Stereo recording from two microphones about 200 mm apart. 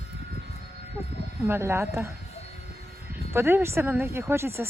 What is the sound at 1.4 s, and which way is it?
Speech, 10° right (ahead or behind).